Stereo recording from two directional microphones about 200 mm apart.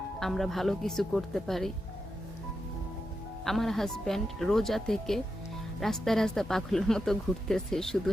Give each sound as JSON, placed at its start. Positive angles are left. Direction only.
{"t": 0.2, "sound": "speech", "side_deg": 0}
{"t": 3.4, "sound": "speech", "side_deg": 0}